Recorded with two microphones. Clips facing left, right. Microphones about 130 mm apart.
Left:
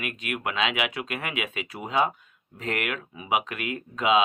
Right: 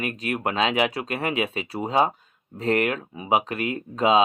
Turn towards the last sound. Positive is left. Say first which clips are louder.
# right 3 dB
turn(degrees=-35)  # may be behind; listen again after turning